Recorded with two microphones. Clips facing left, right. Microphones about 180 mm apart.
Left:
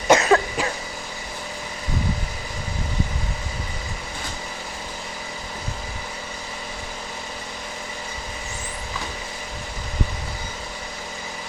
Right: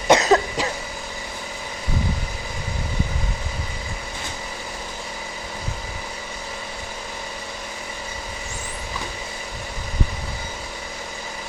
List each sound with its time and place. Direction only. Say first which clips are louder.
0.1 s cough: even; 20° right (ahead or behind)